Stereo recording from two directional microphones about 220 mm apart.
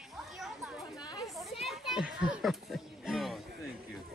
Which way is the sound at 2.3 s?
Centre (ahead or behind).